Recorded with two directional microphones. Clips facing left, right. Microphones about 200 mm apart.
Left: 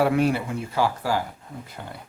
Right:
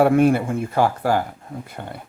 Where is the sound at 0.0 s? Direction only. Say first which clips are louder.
Right 6 dB; 50° right (ahead or behind).